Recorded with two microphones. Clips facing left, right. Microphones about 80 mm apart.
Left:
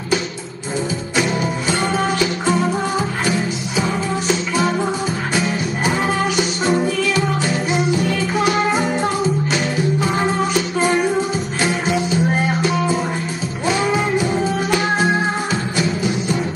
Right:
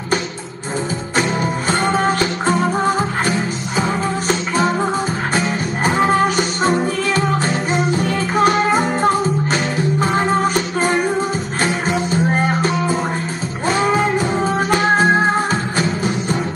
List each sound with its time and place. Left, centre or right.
1.1 s music: right
13.7 s music: right